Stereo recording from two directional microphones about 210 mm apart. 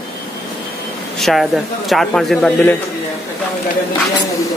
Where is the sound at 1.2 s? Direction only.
Centre (ahead or behind).